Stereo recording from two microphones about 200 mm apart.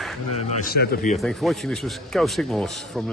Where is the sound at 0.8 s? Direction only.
50° left (ahead or behind).